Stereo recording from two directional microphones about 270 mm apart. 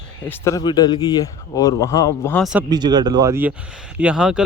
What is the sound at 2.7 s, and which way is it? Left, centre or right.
A man's voice, centre.